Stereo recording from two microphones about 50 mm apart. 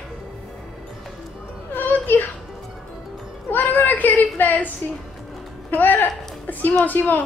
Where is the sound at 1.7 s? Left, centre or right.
Left.